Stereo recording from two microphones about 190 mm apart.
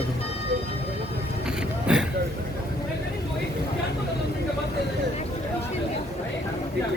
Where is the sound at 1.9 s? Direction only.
5° right (ahead or behind).